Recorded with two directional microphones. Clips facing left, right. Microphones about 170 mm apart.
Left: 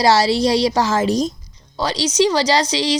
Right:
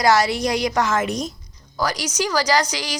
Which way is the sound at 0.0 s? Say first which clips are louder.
Left 3 dB; 30° left (ahead or behind).